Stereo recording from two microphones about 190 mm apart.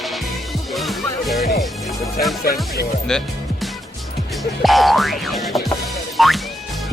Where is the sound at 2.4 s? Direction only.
55° left (ahead or behind).